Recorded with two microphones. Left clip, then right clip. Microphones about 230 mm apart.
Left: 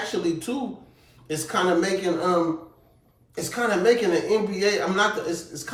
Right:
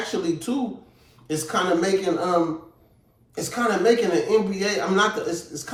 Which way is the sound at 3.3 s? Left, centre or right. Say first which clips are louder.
Right 1 dB; centre.